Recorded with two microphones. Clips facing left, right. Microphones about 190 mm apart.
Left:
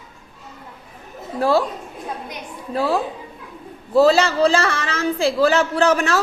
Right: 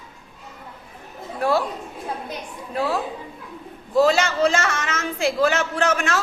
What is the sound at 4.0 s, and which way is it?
Speech, 35° left (ahead or behind).